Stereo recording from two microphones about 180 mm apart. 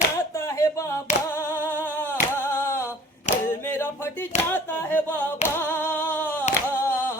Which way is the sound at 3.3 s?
15° left (ahead or behind).